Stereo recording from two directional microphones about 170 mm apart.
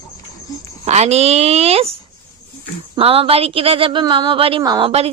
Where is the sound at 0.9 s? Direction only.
40° right (ahead or behind).